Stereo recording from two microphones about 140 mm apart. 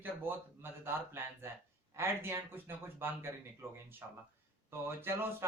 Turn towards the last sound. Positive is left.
turn(degrees=-15)  # may be behind; listen again after turning